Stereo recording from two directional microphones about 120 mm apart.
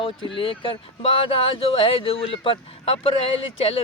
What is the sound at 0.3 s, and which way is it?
Speech, 45° left (ahead or behind).